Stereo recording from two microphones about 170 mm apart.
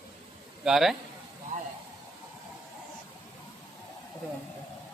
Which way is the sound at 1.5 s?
45° right (ahead or behind).